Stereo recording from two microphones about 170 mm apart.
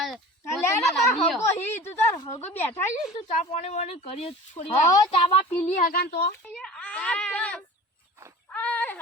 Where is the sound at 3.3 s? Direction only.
40° left (ahead or behind).